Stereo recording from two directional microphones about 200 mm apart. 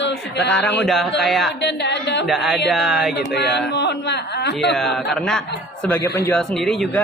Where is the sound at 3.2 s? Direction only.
55° left (ahead or behind).